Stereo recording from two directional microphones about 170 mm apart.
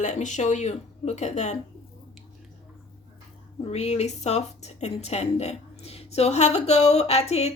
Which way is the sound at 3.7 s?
40° left (ahead or behind).